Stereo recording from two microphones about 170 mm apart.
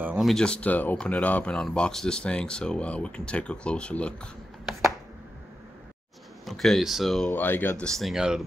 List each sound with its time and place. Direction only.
0.0 s speech: 5° right (ahead or behind)
6.4 s speech: centre (ahead or behind)
7.3 s speech: 10° left (ahead or behind)